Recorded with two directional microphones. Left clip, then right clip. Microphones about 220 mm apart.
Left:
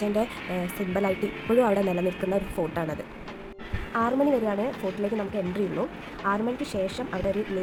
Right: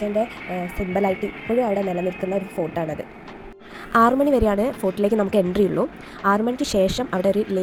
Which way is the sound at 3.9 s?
25° right (ahead or behind).